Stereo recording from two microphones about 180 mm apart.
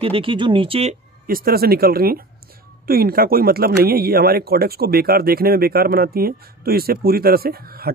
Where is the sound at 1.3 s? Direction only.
55° right (ahead or behind).